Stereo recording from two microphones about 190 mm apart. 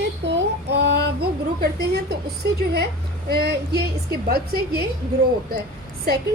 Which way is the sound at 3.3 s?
60° right (ahead or behind).